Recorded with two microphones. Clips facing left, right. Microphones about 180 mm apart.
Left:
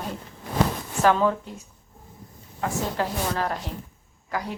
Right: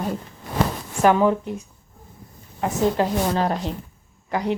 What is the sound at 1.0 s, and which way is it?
A woman's voice, 15° right (ahead or behind).